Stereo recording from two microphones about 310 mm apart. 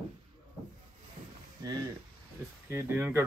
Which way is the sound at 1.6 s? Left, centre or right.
Centre.